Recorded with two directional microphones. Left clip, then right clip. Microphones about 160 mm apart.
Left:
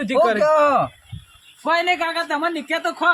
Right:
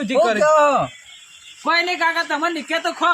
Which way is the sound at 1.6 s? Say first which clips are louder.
Right 1 dB; 5° left (ahead or behind).